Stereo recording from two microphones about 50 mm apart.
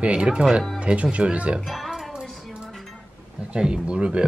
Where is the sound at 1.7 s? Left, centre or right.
Centre.